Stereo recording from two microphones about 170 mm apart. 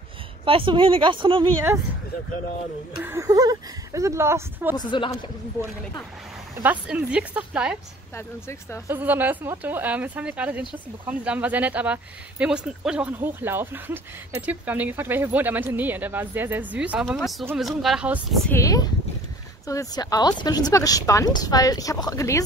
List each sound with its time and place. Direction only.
0.5 s speech: 30° right (ahead or behind)
3.0 s speech: 15° right (ahead or behind)
4.7 s speech: 25° left (ahead or behind)
6.6 s speech: 10° right (ahead or behind)
8.2 s speech: 15° left (ahead or behind)
8.8 s speech: 10° right (ahead or behind)
18.5 s speech: 20° left (ahead or behind)